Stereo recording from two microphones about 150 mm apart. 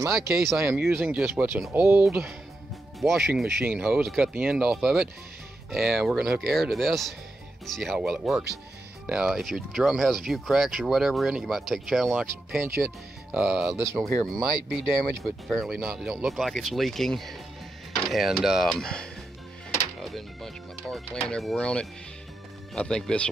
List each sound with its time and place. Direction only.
0.6 s speech: 15° right (ahead or behind)
3.0 s speech: centre (ahead or behind)
12.6 s speech: 15° right (ahead or behind); by 23.3 s 5° left (ahead or behind)